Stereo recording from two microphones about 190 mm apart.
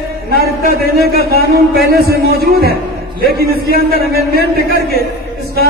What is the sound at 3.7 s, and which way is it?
A man's voice, 55° right (ahead or behind).